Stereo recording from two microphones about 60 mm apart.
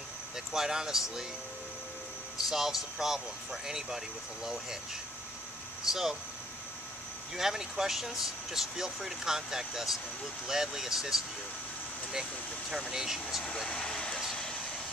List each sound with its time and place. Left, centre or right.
0.5 s speech: centre
2.3 s speech: centre
5.9 s speech: centre
7.3 s speech: centre
12.9 s speech: centre
13.7 s vehicle: centre